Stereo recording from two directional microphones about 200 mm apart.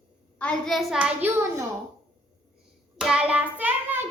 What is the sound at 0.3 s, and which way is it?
A child's voice, 5° left (ahead or behind).